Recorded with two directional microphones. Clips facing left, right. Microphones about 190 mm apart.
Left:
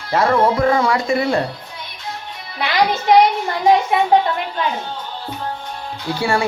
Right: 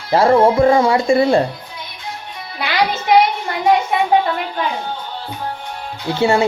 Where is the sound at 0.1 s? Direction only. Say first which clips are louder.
Right 4 dB; 30° right (ahead or behind).